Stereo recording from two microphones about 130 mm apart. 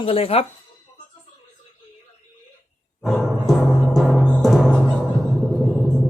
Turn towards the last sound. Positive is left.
turn(degrees=0)  # may be behind; listen again after turning